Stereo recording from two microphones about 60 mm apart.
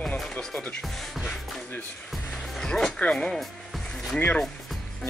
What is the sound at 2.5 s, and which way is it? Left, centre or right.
Speech, centre.